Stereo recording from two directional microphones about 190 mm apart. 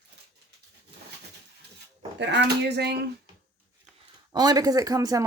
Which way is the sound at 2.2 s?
65° right (ahead or behind).